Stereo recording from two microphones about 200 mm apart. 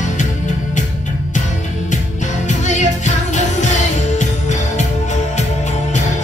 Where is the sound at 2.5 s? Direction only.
35° left (ahead or behind).